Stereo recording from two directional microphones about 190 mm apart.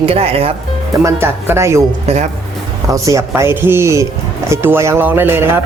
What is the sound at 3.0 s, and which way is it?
Speech, 15° right (ahead or behind).